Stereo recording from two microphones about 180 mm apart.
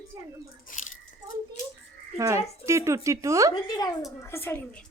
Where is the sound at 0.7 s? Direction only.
50° left (ahead or behind).